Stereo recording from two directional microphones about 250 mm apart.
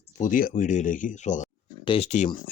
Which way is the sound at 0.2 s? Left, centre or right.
Left.